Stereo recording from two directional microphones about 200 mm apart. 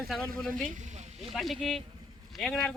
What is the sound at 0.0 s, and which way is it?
Speech, centre (ahead or behind).